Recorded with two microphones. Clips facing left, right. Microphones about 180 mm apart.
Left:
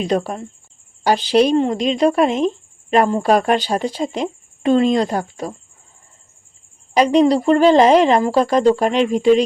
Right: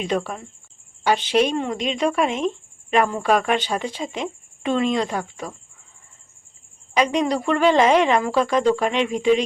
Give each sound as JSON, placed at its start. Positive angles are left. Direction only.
{"t": 0.0, "sound": "speech", "side_deg": 40}
{"t": 6.9, "sound": "speech", "side_deg": 35}